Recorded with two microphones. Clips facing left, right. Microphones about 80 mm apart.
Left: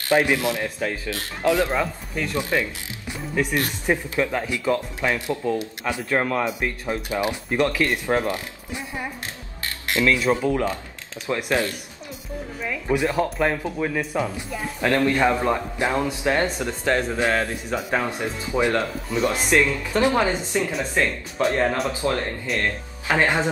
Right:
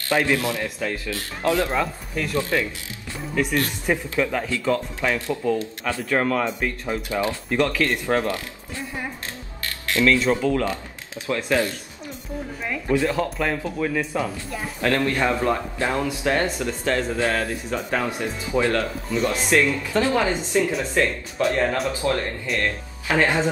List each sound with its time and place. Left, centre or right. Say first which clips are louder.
0.1 s speech: left 2 dB; centre
1.7 s speech: even; centre
2.5 s speech: even; centre
12.9 s speech: even; centre
14.8 s speech: left 2 dB; left
17.7 s speech: left 1 dB; centre
18.5 s speech: even; left